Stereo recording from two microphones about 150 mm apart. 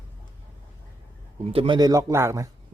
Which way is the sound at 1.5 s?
40° right (ahead or behind).